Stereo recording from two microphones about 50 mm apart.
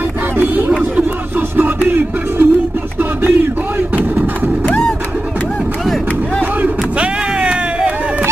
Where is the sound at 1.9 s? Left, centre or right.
Right.